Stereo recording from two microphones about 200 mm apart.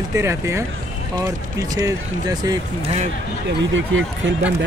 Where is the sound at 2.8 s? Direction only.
30° right (ahead or behind).